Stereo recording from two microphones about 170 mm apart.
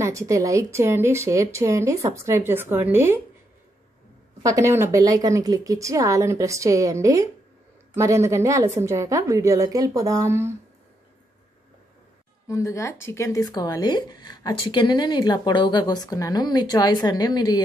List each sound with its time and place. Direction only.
0.0 s speech: 15° right (ahead or behind)
4.4 s a woman's voice: 20° right (ahead or behind)
12.4 s speech: 15° left (ahead or behind)